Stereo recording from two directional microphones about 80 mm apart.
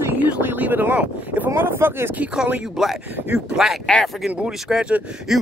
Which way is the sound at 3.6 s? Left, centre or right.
Centre.